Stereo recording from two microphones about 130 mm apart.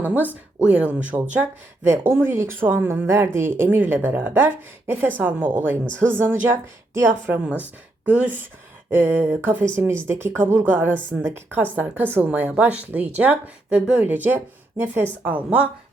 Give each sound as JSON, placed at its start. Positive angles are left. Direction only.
{"t": 0.0, "sound": "speech", "side_deg": -15}